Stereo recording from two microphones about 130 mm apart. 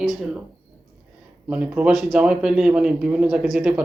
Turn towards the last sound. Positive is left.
turn(degrees=-5)  # may be behind; listen again after turning